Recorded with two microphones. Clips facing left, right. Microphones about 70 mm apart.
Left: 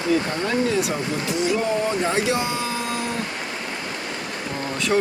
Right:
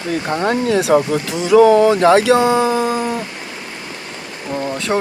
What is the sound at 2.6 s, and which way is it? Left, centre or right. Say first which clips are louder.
Dog: right 10 dB; right.